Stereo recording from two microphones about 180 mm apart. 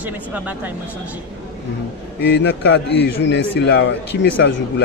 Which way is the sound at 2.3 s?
70° left (ahead or behind).